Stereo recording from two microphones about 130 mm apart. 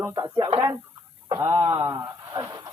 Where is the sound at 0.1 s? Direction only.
35° right (ahead or behind).